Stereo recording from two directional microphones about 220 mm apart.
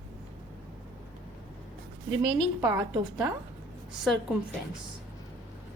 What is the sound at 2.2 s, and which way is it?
A woman's voice, 20° right (ahead or behind).